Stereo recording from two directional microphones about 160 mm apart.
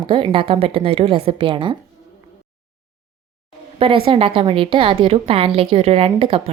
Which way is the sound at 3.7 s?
35° right (ahead or behind).